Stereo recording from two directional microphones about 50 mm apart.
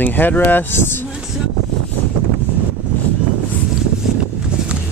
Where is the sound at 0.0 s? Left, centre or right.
Left.